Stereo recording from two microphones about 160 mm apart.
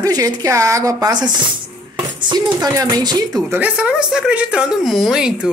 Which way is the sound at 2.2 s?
25° right (ahead or behind).